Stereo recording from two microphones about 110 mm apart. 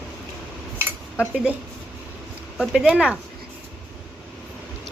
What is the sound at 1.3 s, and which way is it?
Speech, 5° right (ahead or behind).